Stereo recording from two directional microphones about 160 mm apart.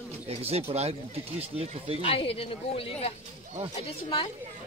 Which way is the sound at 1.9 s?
35° left (ahead or behind).